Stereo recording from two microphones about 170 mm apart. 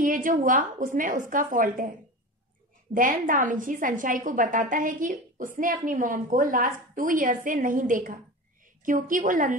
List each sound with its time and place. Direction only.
0.0 s a woman's voice: 50° right (ahead or behind)